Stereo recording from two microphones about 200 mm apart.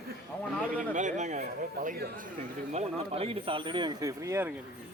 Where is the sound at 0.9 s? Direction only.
35° right (ahead or behind); by 4.5 s 15° right (ahead or behind).